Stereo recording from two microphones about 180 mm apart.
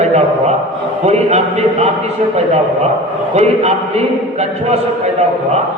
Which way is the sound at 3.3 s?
35° right (ahead or behind).